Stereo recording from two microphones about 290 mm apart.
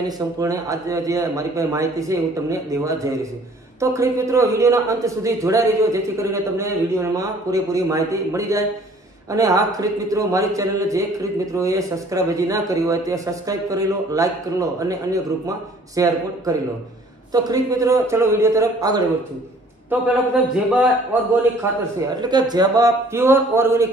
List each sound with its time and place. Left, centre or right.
0.0 s a man's voice: centre
20.7 s a man's voice: centre